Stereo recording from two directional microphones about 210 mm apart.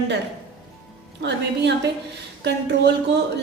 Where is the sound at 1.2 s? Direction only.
55° right (ahead or behind).